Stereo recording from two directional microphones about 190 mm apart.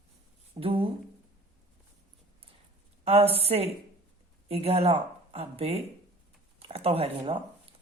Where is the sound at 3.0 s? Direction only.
30° right (ahead or behind).